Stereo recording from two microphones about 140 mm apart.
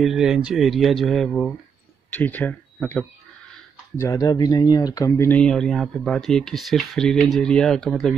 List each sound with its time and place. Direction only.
0.0 s speech: 5° right (ahead or behind)
2.1 s speech: 10° left (ahead or behind)
4.0 s speech: 25° left (ahead or behind)
5.4 s speech: 5° left (ahead or behind)